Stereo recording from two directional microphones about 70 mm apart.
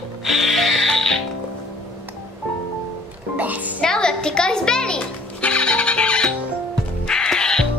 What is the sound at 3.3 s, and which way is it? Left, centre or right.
Music, right.